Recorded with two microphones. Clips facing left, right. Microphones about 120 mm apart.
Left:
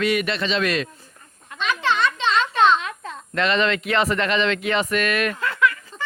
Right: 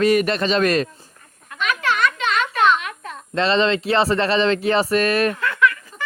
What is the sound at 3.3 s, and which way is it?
A man's voice, 30° right (ahead or behind).